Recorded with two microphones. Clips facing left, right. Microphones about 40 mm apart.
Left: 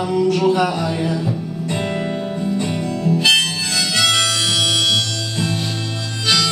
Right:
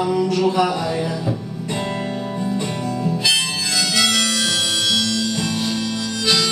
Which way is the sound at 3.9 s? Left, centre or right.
Left.